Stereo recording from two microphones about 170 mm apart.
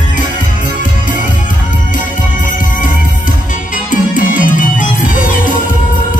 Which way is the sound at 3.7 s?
50° left (ahead or behind).